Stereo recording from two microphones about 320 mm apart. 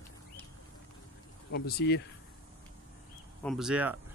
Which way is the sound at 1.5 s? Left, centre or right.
Left.